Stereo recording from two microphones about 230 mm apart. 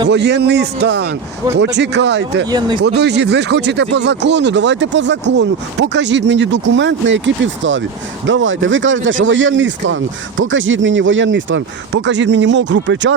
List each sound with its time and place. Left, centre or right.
0.1 s speech: right
2.5 s speech: centre
2.8 s speech: right